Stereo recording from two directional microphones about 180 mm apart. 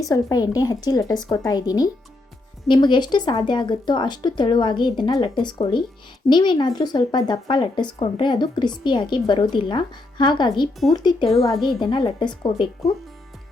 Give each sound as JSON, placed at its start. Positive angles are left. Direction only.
{"t": 0.0, "sound": "speech", "side_deg": 20}
{"t": 11.3, "sound": "a woman's voice", "side_deg": 0}
{"t": 11.8, "sound": "speech", "side_deg": 25}